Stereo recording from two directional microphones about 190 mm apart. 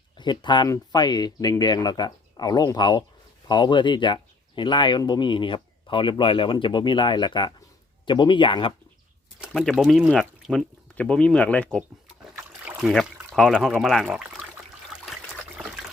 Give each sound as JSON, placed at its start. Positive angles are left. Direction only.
{"t": 0.2, "sound": "speech", "side_deg": 25}
{"t": 9.4, "sound": "speech", "side_deg": 0}
{"t": 12.4, "sound": "a sound", "side_deg": -10}
{"t": 12.9, "sound": "speech", "side_deg": 0}